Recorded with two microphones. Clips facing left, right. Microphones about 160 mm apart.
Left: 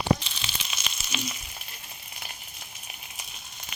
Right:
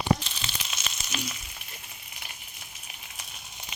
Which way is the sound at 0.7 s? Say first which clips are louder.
Left 1 dB; 5° left (ahead or behind).